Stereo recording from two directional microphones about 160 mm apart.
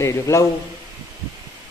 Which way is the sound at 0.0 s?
20° left (ahead or behind).